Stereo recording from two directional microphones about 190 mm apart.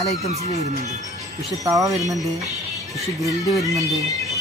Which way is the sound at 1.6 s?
20° right (ahead or behind).